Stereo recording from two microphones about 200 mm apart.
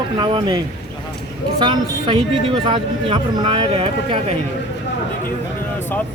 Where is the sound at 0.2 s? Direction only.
25° right (ahead or behind).